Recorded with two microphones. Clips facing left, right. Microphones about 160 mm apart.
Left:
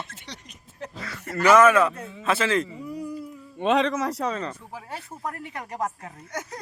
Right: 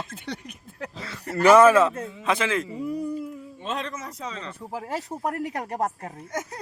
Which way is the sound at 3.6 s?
75° left (ahead or behind).